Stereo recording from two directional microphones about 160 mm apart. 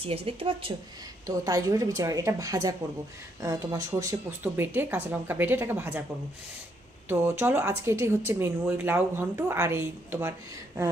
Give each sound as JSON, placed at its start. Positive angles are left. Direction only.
{"t": 0.0, "sound": "speech", "side_deg": -35}
{"t": 1.2, "sound": "a woman's voice", "side_deg": -20}
{"t": 7.1, "sound": "speech", "side_deg": -10}